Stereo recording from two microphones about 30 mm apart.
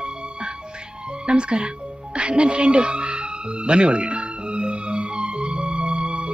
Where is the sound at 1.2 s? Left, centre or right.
Right.